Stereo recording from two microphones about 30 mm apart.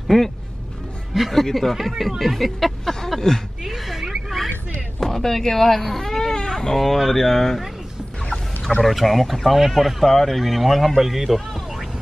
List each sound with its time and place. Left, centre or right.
0.1 s speech: centre
1.4 s speech: centre
2.8 s speech: centre
3.6 s a sound: centre
5.0 s speech: centre
6.3 s baby cry: left
6.8 s speech: centre
8.8 s speech: centre